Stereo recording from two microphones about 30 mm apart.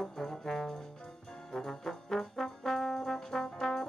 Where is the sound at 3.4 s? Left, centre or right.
Centre.